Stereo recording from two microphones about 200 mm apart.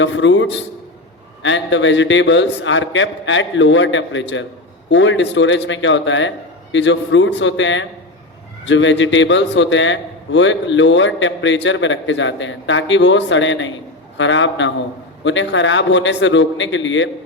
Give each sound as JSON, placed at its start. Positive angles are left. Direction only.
{"t": 0.0, "sound": "a man's voice", "side_deg": 65}